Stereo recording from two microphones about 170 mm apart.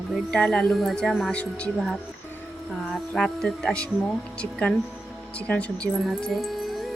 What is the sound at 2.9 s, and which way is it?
Music, centre (ahead or behind).